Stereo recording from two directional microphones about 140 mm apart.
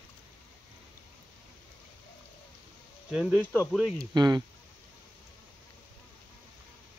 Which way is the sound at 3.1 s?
5° left (ahead or behind).